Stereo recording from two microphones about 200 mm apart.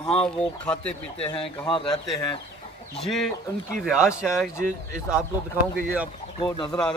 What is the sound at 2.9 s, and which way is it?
A man's voice, centre (ahead or behind).